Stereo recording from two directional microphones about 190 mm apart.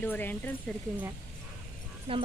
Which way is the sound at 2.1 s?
30° right (ahead or behind).